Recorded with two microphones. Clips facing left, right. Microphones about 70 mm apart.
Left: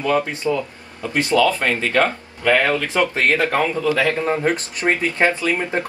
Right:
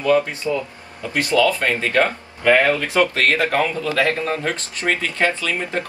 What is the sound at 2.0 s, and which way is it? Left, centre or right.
Speech, right.